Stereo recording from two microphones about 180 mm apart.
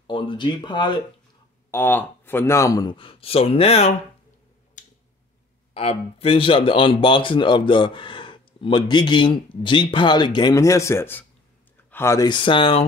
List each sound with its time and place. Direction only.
0.0 s speech: 25° left (ahead or behind)
1.7 s speech: 10° left (ahead or behind); by 3.9 s 35° left (ahead or behind)
4.8 s tick-tock: 45° left (ahead or behind)
5.8 s speech: 30° left (ahead or behind)